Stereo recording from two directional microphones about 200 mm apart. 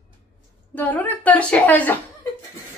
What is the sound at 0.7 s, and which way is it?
A woman's voice, 10° left (ahead or behind).